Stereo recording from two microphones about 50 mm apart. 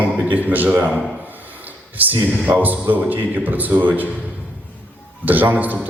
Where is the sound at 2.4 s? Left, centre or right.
Right.